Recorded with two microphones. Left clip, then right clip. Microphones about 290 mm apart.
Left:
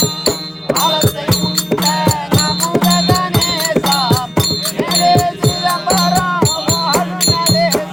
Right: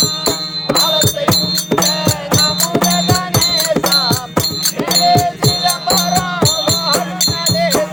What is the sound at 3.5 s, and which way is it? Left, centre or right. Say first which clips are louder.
Music: right 1 dB; centre.